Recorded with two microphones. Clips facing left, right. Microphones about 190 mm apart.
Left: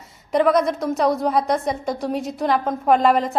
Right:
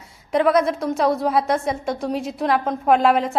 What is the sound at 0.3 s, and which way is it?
A woman's voice, centre (ahead or behind).